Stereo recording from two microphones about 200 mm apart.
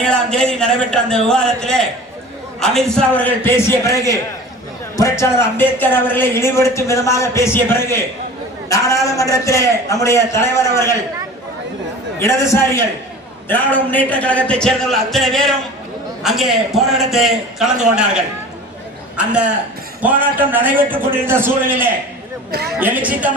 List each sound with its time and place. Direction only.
0.0 s a man's voice: 5° left (ahead or behind)
9.1 s a man's voice: 15° left (ahead or behind)
12.2 s a man's voice: 15° left (ahead or behind); by 23.3 s 5° right (ahead or behind)